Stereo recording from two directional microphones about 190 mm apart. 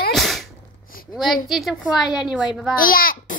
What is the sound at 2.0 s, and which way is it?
Speech, 20° left (ahead or behind).